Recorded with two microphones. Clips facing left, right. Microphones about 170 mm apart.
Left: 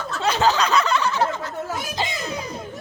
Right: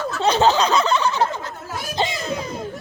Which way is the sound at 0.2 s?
30° right (ahead or behind).